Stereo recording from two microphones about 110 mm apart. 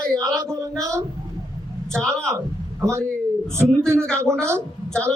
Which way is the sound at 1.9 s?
5° left (ahead or behind).